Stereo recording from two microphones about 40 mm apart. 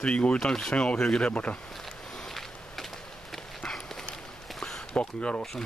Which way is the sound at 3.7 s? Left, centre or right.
Centre.